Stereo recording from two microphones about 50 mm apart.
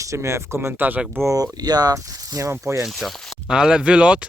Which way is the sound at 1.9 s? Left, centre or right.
Right.